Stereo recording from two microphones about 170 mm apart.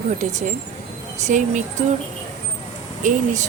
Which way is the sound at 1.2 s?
45° right (ahead or behind).